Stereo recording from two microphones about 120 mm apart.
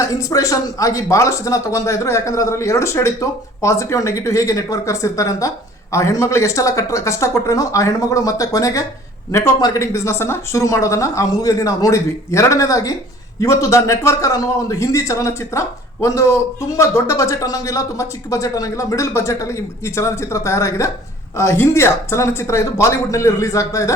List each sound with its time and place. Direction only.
0.0 s a man's voice: 30° left (ahead or behind)